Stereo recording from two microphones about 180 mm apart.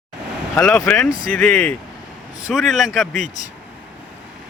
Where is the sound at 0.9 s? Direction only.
10° left (ahead or behind).